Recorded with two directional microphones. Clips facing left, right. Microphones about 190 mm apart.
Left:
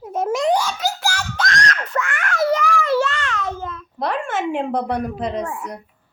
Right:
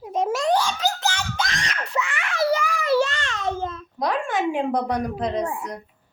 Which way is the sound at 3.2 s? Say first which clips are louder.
Even; 25° right (ahead or behind).